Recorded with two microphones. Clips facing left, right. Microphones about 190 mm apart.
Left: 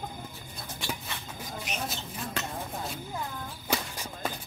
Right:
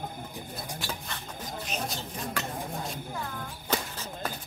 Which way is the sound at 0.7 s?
5° left (ahead or behind).